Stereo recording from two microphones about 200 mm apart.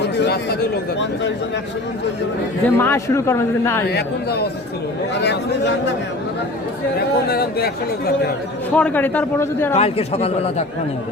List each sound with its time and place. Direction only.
0.0 s speech: 55° left (ahead or behind)
2.6 s speech: 10° left (ahead or behind)
3.8 s speech: 55° left (ahead or behind)
7.3 s speech: 50° left (ahead or behind)
8.7 s speech: 10° left (ahead or behind)
9.7 s a man's voice: 30° left (ahead or behind)